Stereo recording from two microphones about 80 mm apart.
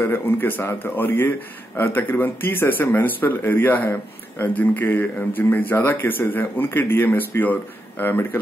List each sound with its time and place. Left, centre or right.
0.0 s speech: left